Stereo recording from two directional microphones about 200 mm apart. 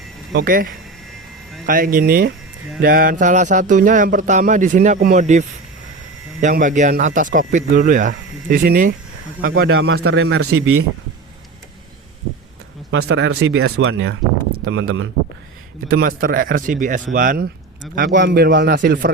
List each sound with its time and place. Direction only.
0.3 s a man's voice: 45° right (ahead or behind)
9.9 s a man's voice: 90° right
12.9 s a man's voice: 80° right
13.7 s speech: 80° right
15.9 s a man's voice: 45° right (ahead or behind)